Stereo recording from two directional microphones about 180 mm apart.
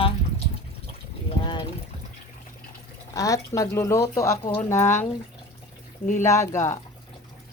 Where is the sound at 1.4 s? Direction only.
25° left (ahead or behind).